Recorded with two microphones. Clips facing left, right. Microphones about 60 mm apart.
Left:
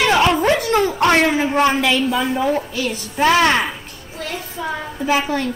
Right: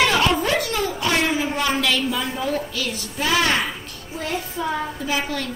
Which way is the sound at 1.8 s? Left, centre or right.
Left.